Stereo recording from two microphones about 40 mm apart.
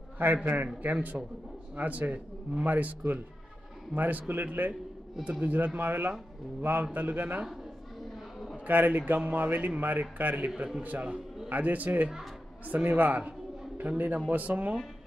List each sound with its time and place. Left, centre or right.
0.2 s a man's voice: right
1.1 s a man's voice: right
1.8 s a man's voice: right
5.2 s a man's voice: right
5.8 s a man's voice: right
8.6 s a man's voice: right